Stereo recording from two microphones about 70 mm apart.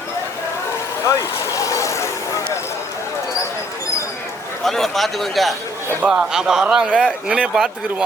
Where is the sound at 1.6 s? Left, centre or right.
Left.